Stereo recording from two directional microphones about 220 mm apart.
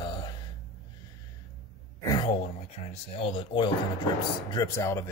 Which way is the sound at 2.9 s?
25° left (ahead or behind).